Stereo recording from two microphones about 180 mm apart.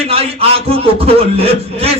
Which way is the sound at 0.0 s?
35° right (ahead or behind).